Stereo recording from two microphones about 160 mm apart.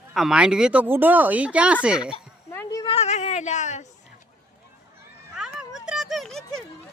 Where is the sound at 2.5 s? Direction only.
15° left (ahead or behind).